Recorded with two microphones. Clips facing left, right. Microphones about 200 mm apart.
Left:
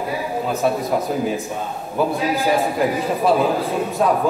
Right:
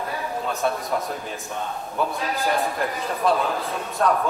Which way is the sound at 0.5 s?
Centre (ahead or behind).